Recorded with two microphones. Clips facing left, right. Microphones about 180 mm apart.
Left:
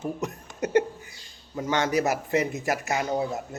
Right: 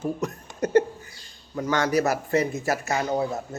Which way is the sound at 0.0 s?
20° left (ahead or behind).